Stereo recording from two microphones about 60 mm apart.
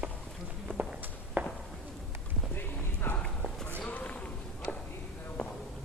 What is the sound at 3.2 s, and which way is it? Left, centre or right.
Clip-clop, centre.